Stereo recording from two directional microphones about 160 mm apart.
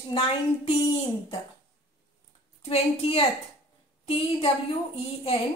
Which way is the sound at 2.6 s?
40° left (ahead or behind).